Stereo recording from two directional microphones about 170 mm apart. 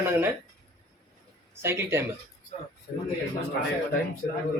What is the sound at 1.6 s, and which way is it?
Speech, 15° right (ahead or behind).